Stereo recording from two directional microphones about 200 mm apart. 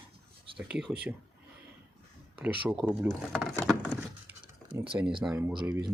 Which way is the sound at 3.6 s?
5° left (ahead or behind).